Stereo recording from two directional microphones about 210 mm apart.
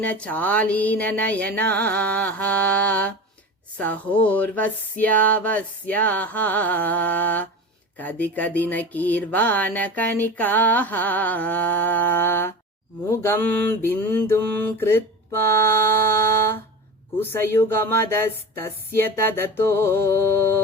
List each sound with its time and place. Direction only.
0.0 s speech: 5° left (ahead or behind)
17.2 s speech: 10° left (ahead or behind)